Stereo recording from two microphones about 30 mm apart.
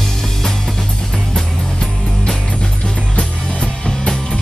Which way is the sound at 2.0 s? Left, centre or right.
Left.